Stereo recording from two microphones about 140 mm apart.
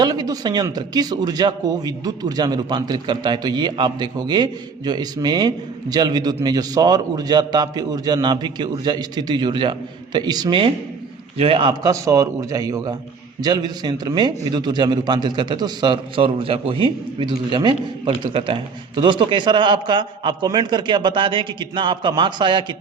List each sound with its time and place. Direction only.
0.0 s a man's voice: 30° right (ahead or behind)
11.7 s a man's voice: 25° right (ahead or behind)